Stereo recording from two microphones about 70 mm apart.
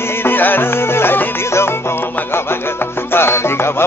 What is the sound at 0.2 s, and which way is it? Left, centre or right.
Music, left.